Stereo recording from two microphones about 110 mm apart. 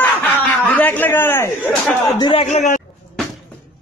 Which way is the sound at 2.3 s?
90° left.